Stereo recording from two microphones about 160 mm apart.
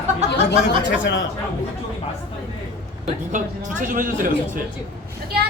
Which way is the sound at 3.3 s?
50° right (ahead or behind).